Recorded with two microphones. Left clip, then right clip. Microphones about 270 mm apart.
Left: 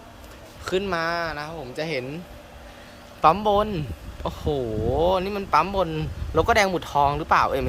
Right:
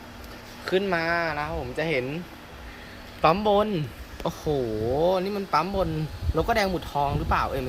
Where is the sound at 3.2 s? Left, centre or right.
Centre.